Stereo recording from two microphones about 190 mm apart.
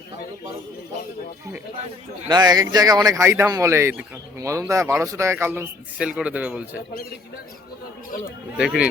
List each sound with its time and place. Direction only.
2.2 s speech: 20° right (ahead or behind)
8.5 s speech: 5° right (ahead or behind)